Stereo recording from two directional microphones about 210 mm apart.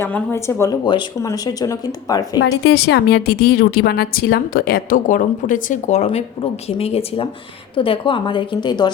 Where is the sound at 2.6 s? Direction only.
55° left (ahead or behind).